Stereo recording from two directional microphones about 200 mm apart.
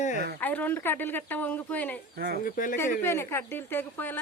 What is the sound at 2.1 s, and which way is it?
Speech, 50° right (ahead or behind).